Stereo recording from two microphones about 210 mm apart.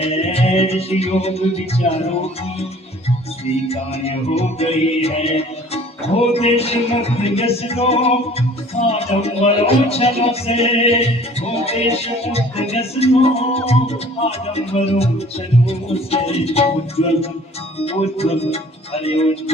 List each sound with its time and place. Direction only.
0.0 s music: 30° left (ahead or behind)
3.7 s music: 30° left (ahead or behind)